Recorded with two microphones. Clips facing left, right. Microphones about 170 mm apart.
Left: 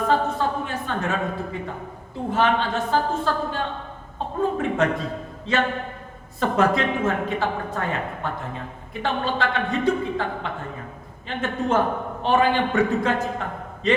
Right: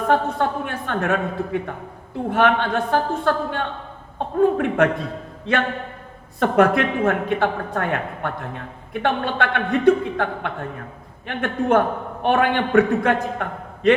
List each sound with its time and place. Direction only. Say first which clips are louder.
0.1 s a woman's voice: right 4 dB; 60° right (ahead or behind)